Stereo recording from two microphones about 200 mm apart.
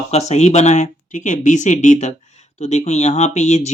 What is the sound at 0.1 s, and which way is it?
Speech, 35° left (ahead or behind).